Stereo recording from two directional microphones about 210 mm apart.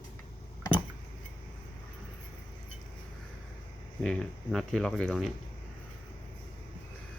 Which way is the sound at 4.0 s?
5° left (ahead or behind).